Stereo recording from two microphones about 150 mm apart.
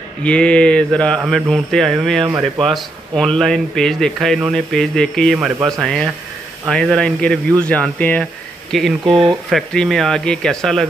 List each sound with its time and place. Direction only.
0.2 s mantra: 10° left (ahead or behind)
1.2 s speech: centre (ahead or behind)
2.2 s speech: 20° right (ahead or behind)
2.6 s speech: centre (ahead or behind)
7.6 s mantra: 10° left (ahead or behind)
8.7 s speech: centre (ahead or behind)